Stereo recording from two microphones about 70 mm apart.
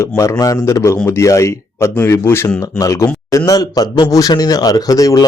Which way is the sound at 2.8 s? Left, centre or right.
Left.